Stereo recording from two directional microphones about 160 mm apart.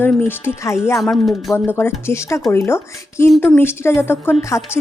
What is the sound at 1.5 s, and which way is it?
Speech, 15° left (ahead or behind).